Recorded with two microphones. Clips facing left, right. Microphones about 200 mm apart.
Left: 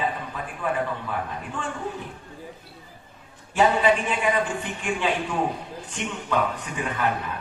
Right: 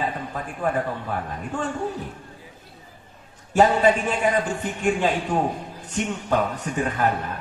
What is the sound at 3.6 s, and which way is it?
A man's voice, 45° right (ahead or behind).